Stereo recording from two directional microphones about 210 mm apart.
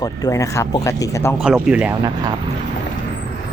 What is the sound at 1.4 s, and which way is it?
Speech, 5° right (ahead or behind).